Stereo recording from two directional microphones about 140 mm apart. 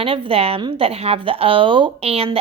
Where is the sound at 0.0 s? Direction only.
40° right (ahead or behind).